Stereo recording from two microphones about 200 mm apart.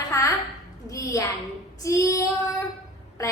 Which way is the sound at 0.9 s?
15° left (ahead or behind).